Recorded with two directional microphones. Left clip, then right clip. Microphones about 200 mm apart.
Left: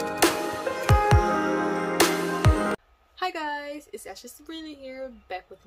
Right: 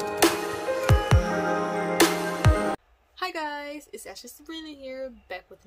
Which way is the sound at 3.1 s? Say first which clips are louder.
Left 1 dB; 5° right (ahead or behind).